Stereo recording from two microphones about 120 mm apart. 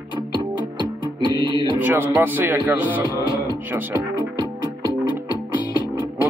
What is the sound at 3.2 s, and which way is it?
Music, 30° left (ahead or behind).